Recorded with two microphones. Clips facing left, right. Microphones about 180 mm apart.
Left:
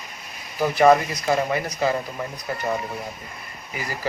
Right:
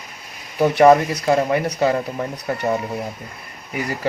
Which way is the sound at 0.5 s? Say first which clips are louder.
Right 4 dB; 70° right (ahead or behind).